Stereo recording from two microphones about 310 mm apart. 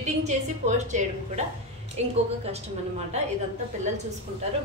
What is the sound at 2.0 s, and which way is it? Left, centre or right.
Speech, right.